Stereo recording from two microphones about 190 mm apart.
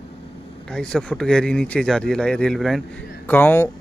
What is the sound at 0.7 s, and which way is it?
Speech, 5° left (ahead or behind).